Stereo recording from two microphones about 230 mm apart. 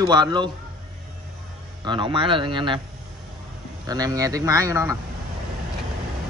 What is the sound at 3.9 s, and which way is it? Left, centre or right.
Speech, centre.